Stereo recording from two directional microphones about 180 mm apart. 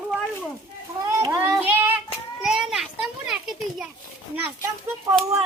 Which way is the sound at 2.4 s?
Centre (ahead or behind).